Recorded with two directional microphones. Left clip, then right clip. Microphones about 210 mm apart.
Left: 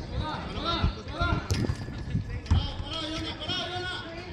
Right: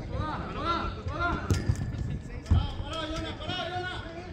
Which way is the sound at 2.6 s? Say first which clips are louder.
Left 1 dB; 20° right (ahead or behind).